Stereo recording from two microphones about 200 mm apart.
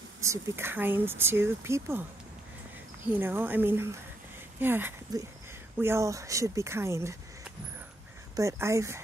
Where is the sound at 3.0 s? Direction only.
10° right (ahead or behind).